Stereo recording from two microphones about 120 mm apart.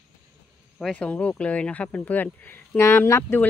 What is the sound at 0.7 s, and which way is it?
Speech, 5° left (ahead or behind).